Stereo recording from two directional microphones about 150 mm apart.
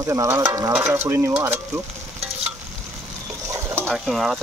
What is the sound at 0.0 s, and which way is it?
Stir, 20° right (ahead or behind).